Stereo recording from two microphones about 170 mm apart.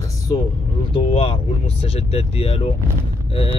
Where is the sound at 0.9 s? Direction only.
35° left (ahead or behind).